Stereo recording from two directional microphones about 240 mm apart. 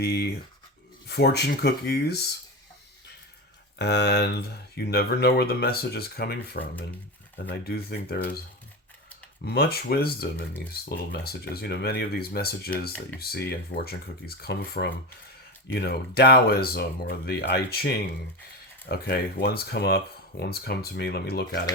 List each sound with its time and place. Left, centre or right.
0.0 s speech: left
3.8 s speech: left
7.6 s speech: left
9.4 s speech: left